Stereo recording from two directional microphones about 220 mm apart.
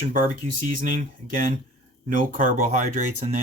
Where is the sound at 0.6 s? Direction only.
40° right (ahead or behind).